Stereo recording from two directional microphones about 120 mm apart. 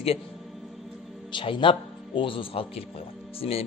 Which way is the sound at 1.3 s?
45° left (ahead or behind).